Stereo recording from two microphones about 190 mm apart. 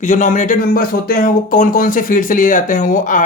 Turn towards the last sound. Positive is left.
turn(degrees=45)  # may be behind; listen again after turning